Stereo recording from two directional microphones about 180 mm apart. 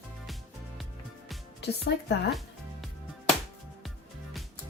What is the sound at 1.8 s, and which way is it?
Speech, 70° left (ahead or behind).